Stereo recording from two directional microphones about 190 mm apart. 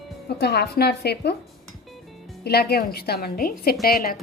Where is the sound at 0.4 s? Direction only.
60° left (ahead or behind).